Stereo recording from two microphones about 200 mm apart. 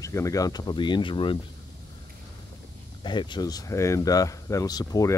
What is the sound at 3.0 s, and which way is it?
Speech, 25° left (ahead or behind).